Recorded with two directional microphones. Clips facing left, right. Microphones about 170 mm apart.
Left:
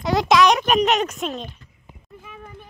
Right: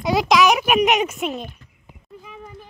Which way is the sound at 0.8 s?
15° right (ahead or behind).